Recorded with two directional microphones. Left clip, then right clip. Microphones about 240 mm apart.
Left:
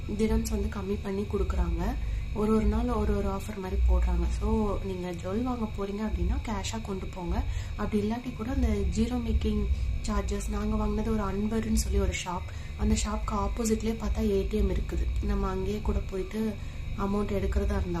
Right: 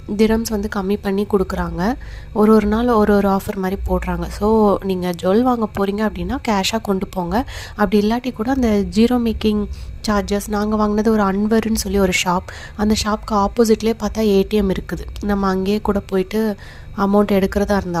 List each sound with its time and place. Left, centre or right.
0.2 s a woman's voice: right